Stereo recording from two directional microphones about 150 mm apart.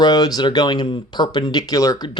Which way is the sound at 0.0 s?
25° left (ahead or behind).